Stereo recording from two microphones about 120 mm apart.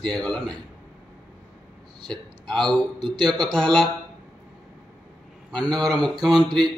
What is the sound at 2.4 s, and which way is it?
A man's voice, 40° right (ahead or behind).